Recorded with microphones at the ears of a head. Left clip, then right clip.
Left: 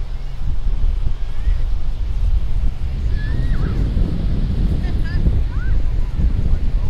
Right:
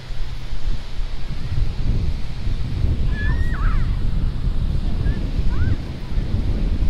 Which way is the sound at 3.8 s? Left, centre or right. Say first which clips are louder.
Left 5 dB; left.